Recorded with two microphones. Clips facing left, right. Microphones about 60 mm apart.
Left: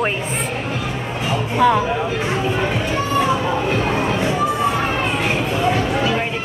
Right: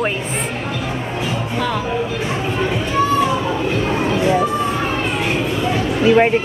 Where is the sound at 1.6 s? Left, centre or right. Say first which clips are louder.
Left 8 dB; centre.